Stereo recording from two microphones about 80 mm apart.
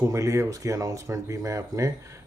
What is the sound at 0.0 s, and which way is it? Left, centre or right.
Speech, right.